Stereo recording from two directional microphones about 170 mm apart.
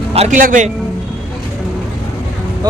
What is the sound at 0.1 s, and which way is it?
Speech, 40° right (ahead or behind).